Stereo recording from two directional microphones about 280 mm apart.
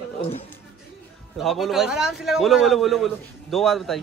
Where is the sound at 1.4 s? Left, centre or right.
Centre.